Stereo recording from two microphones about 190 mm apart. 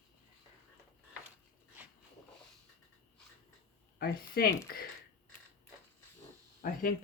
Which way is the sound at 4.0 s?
50° left (ahead or behind).